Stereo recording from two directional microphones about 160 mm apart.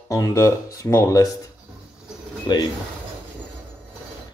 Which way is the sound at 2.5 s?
25° left (ahead or behind).